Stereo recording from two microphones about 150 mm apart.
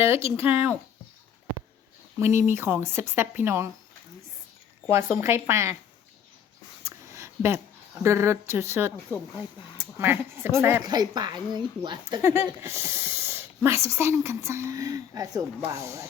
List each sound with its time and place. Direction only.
0.2 s speech: 40° left (ahead or behind)
0.4 s speech: 15° right (ahead or behind)
2.1 s speech: 15° right (ahead or behind)
4.9 s speech: 15° right (ahead or behind)
6.8 s a sound: 20° right (ahead or behind)
8.0 s speech: 15° right (ahead or behind)
10.8 s speech: 25° right (ahead or behind)
12.2 s speech: 15° right (ahead or behind)